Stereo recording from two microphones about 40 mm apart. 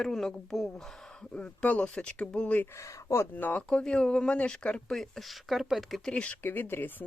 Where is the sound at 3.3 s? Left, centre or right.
Left.